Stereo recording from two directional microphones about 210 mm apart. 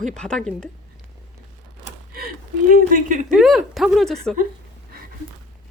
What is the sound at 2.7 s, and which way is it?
Speech, 40° right (ahead or behind).